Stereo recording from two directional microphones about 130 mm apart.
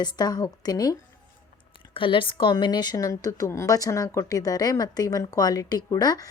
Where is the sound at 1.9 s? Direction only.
40° left (ahead or behind).